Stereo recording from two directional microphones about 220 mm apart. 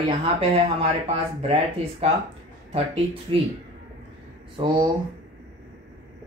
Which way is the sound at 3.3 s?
20° right (ahead or behind).